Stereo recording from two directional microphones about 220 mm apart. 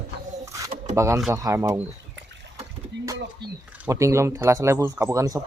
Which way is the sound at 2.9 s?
50° right (ahead or behind).